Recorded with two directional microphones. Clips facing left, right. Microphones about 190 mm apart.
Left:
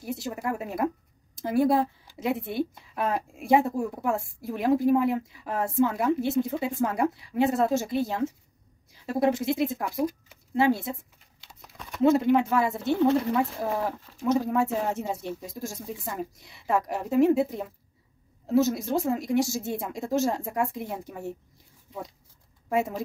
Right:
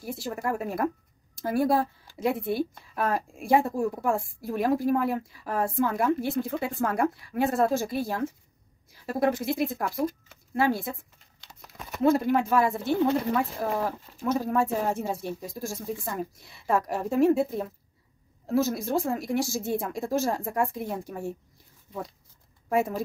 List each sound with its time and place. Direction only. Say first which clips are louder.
0.0 s speech: even; 20° left (ahead or behind)
9.9 s speech: left 1 dB; 10° left (ahead or behind)
10.5 s speech: left 2 dB; 20° left (ahead or behind)
12.0 s speech: left 2 dB; 20° left (ahead or behind)
16.3 s speech: even; 20° left (ahead or behind)